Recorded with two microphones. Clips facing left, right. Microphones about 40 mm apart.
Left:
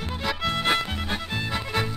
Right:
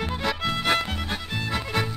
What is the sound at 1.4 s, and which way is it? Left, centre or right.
Music, centre.